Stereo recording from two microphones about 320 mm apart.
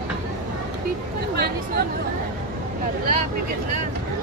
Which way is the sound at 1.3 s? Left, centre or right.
Right.